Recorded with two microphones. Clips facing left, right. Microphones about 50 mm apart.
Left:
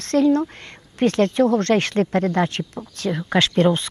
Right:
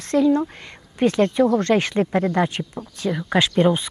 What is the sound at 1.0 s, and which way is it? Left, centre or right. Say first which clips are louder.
Speech: even; centre.